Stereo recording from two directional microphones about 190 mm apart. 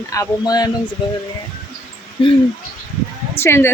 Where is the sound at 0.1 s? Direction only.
20° left (ahead or behind).